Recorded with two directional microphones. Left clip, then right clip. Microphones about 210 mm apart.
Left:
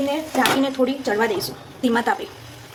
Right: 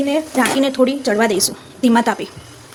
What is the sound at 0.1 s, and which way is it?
Speech, 50° right (ahead or behind).